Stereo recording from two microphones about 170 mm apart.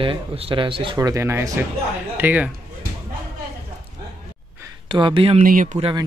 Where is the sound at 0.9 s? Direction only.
15° right (ahead or behind).